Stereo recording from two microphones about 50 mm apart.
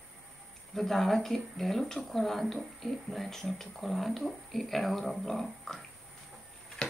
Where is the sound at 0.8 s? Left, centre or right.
Centre.